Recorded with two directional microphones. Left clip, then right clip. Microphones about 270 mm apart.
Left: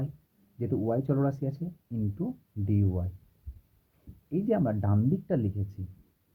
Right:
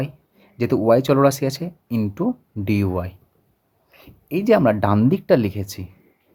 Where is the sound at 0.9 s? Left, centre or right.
Right.